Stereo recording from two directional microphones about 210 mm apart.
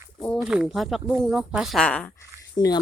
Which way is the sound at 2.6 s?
20° left (ahead or behind).